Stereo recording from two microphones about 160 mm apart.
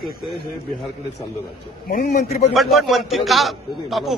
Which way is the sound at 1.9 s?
65° left (ahead or behind).